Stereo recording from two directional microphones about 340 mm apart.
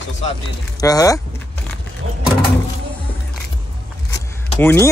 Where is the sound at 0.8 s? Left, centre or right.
Centre.